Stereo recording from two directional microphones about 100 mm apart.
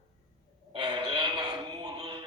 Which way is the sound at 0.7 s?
50° right (ahead or behind).